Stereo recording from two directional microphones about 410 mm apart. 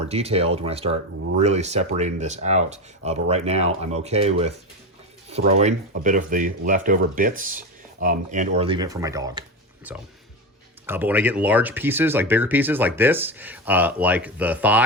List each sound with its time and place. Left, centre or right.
0.0 s speech: centre